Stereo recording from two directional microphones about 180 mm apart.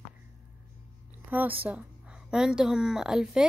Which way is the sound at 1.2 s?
10° right (ahead or behind).